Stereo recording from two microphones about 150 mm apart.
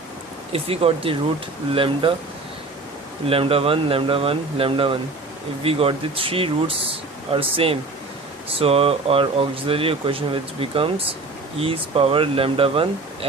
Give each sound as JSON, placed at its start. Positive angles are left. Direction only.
{"t": 0.5, "sound": "speech", "side_deg": -40}
{"t": 3.2, "sound": "speech", "side_deg": -40}